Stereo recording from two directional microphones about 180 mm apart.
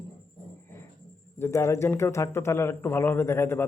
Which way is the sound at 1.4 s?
15° left (ahead or behind).